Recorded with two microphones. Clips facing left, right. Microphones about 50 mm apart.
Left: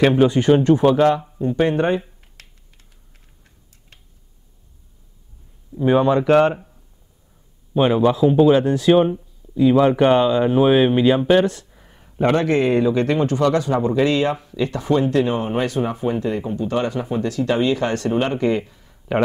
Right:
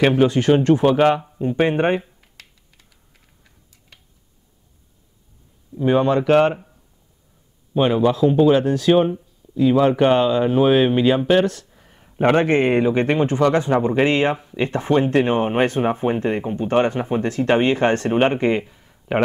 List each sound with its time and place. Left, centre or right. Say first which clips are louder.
0.5 s speech: left 1 dB; centre
0.9 s speech: even; right
5.8 s speech: left 1 dB; centre
7.7 s speech: left 1 dB; centre
12.2 s a man's voice: right 1 dB; right
18.6 s a sound: even; centre
19.1 s speech: even; centre